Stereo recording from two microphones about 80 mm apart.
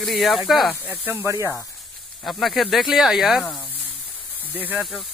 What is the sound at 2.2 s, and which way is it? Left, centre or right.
Speech, centre.